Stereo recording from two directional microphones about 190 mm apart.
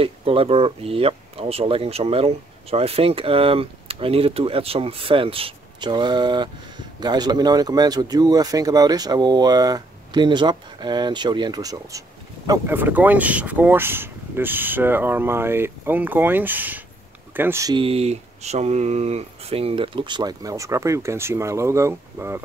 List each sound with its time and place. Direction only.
0.0 s speech: 30° right (ahead or behind); by 22.4 s 15° right (ahead or behind)